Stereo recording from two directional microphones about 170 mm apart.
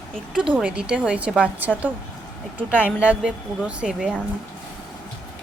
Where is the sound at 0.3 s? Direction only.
5° right (ahead or behind).